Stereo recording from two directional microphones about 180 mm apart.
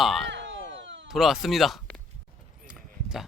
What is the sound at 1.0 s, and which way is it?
Speech, centre (ahead or behind).